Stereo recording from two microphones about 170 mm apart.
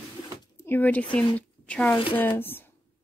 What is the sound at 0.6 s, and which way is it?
A woman's voice, 10° left (ahead or behind).